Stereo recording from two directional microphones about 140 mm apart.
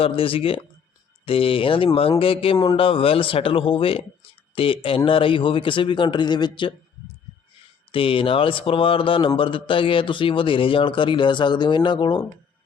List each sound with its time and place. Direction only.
0.0 s speech: 40° left (ahead or behind)
7.9 s speech: 40° left (ahead or behind)